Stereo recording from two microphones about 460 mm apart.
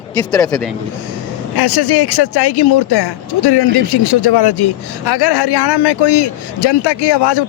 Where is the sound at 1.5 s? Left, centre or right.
Left.